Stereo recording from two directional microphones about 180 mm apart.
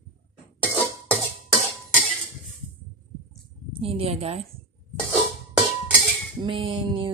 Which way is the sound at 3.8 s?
30° right (ahead or behind).